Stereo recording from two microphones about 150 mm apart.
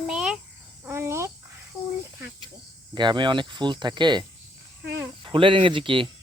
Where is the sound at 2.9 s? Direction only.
30° right (ahead or behind).